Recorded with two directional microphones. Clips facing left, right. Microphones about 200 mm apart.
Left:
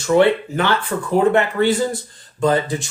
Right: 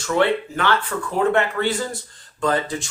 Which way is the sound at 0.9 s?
25° left (ahead or behind).